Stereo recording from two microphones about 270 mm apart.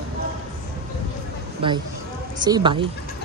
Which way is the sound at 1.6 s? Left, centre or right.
Centre.